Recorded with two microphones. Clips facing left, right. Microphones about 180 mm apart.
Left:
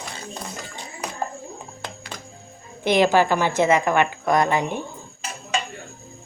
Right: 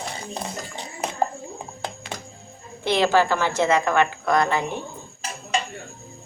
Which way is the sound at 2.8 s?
15° left (ahead or behind).